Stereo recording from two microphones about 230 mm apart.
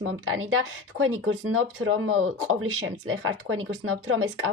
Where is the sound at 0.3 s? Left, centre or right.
Right.